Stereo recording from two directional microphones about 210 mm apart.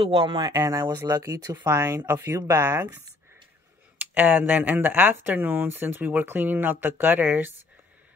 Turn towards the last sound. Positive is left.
turn(degrees=-10)  # may be behind; listen again after turning